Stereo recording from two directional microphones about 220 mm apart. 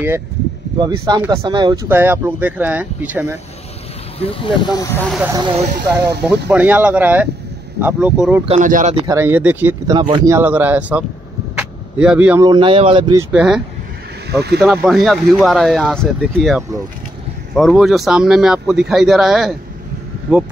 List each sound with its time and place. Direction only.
1.0 s speech: 15° right (ahead or behind)
4.2 s speech: 25° left (ahead or behind)
5.3 s speech: 20° right (ahead or behind)
6.2 s speech: 5° right (ahead or behind)
8.5 s speech: 35° right (ahead or behind)
9.0 s speech: 10° right (ahead or behind)
11.5 s a sound: 5° right (ahead or behind)
12.4 s speech: 20° right (ahead or behind)
13.3 s speech: 5° right (ahead or behind)
14.3 s speech: 50° right (ahead or behind)
14.6 s speech: centre (ahead or behind)